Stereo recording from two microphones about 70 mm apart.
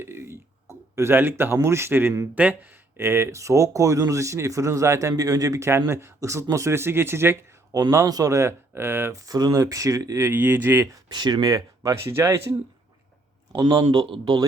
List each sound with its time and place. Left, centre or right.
0.0 s a sound: right
1.6 s speech: right
5.6 s speech: right
7.7 s speech: right
9.1 s speech: right
10.2 s speech: right
11.1 s speech: right
12.1 s speech: right
13.6 s a man's voice: right